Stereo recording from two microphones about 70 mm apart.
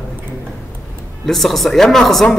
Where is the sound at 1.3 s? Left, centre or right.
Centre.